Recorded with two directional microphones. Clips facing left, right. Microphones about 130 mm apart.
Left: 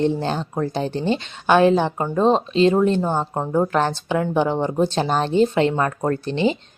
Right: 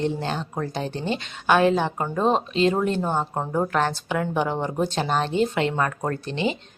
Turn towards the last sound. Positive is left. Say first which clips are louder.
# left 5 dB
turn(degrees=35)  # may be behind; listen again after turning